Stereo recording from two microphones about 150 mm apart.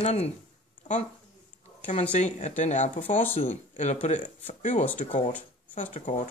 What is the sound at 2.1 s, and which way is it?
Speech, 55° left (ahead or behind).